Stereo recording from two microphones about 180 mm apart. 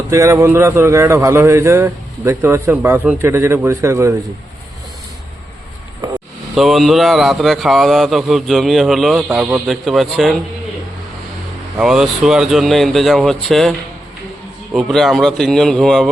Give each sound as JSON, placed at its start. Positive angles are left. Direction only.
{"t": 0.1, "sound": "a man's voice", "side_deg": -15}
{"t": 6.0, "sound": "a sound", "side_deg": -20}
{"t": 6.5, "sound": "speech", "side_deg": 0}
{"t": 11.8, "sound": "speech", "side_deg": -5}